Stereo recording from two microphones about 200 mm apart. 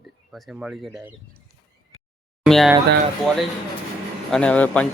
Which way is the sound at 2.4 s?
Centre (ahead or behind).